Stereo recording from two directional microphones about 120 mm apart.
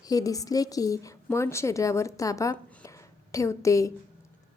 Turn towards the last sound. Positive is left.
turn(degrees=25)  # may be behind; listen again after turning